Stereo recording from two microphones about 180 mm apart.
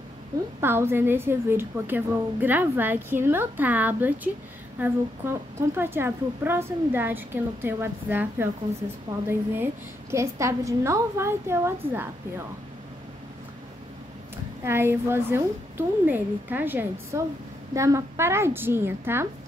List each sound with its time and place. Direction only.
0.6 s a woman's voice: 15° right (ahead or behind)
14.6 s a woman's voice: 15° right (ahead or behind)